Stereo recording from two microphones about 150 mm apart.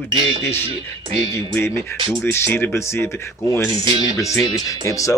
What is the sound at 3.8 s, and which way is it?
Speech, 35° right (ahead or behind).